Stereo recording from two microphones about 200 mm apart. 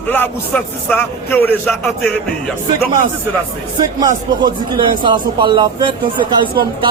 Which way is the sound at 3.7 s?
20° right (ahead or behind).